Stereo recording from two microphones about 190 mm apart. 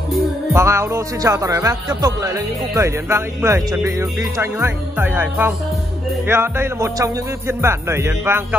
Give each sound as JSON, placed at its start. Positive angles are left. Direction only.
{"t": 0.5, "sound": "speech", "side_deg": -15}